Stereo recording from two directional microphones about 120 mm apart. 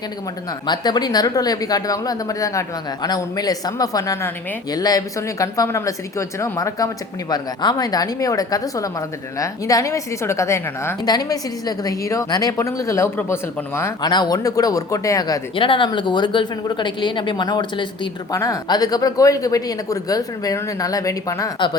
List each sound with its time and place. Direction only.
0.7 s speech: 35° left (ahead or behind)
14.0 s speech: 35° left (ahead or behind)
15.5 s speech: 45° left (ahead or behind)
18.3 s speech: 30° left (ahead or behind)